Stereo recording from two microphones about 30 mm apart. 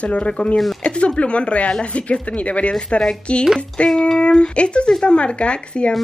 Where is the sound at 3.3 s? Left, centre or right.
Left.